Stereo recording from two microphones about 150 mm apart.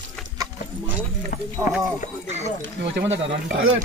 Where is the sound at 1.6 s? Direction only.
25° right (ahead or behind).